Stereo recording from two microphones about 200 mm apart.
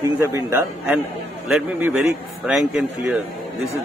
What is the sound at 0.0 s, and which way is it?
A man's voice, 15° right (ahead or behind).